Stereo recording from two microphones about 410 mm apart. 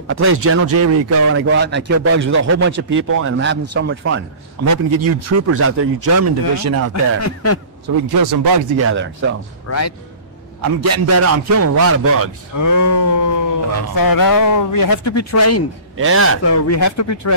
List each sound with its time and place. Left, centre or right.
0.1 s a man's voice: right
6.9 s speech: left
8.1 s speech: right
8.7 s a man's voice: right
9.7 s speech: left
10.6 s a man's voice: right
12.5 s speech: left
16.0 s a man's voice: right
16.4 s speech: left